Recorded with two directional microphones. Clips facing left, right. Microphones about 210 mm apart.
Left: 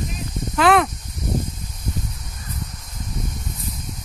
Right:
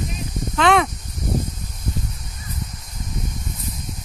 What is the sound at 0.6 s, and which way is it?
Speech, 5° left (ahead or behind).